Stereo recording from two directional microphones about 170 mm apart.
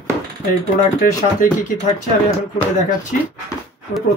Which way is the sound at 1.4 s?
55° left (ahead or behind).